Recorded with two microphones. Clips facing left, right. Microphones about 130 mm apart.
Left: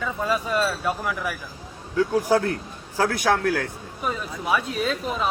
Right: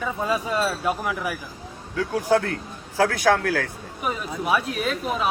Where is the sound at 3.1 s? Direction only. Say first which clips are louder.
Right 1 dB; 20° left (ahead or behind).